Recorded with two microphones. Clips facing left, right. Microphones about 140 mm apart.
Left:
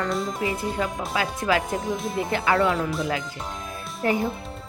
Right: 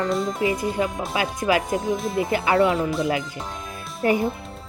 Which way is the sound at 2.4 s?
20° right (ahead or behind).